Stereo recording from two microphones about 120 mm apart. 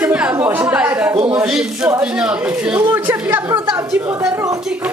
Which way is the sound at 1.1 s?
45° right (ahead or behind).